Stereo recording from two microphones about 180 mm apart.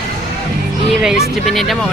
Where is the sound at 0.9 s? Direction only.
Centre (ahead or behind).